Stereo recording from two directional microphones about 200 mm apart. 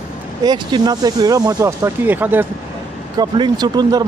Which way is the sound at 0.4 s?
20° right (ahead or behind).